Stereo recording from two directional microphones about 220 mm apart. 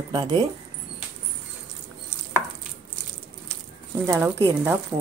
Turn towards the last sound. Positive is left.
turn(degrees=-10)  # may be behind; listen again after turning